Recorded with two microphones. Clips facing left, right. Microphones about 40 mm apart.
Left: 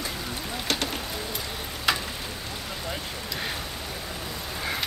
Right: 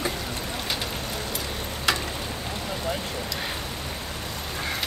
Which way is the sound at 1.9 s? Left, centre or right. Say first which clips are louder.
Even; centre.